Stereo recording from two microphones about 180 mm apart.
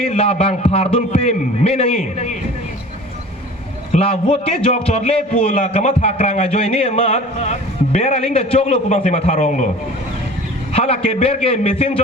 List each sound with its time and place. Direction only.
0.1 s a man's voice: 35° left (ahead or behind)
3.9 s a man's voice: 35° left (ahead or behind)
10.7 s a man's voice: 35° left (ahead or behind)